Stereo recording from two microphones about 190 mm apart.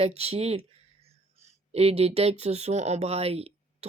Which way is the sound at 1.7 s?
30° right (ahead or behind).